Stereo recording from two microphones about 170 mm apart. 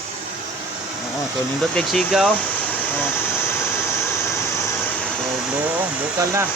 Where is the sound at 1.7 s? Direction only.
Centre (ahead or behind).